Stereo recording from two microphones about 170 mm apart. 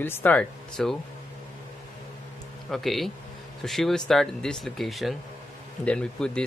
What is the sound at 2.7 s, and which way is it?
Speech, centre (ahead or behind).